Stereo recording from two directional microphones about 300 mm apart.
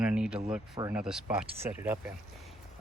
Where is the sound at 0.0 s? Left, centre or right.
Centre.